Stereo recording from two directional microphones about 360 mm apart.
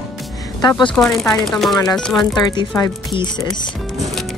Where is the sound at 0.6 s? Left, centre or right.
Centre.